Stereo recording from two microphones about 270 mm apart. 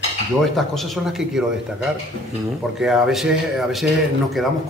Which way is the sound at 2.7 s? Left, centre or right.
Centre.